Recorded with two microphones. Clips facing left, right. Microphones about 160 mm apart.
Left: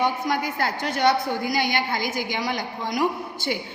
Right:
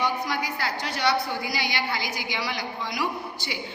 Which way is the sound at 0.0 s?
50° left (ahead or behind).